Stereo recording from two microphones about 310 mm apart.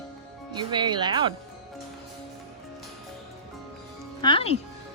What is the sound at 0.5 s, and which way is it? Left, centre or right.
Speech, centre.